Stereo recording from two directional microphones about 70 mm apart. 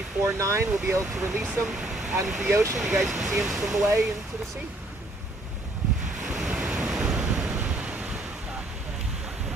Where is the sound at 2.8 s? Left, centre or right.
Centre.